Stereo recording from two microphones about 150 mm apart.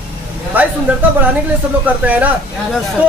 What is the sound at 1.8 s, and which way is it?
Speech, 10° right (ahead or behind).